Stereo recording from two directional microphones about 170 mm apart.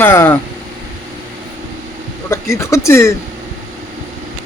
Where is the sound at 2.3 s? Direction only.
15° left (ahead or behind).